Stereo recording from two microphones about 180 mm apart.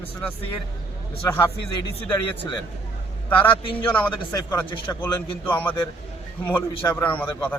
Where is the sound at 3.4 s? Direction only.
25° left (ahead or behind).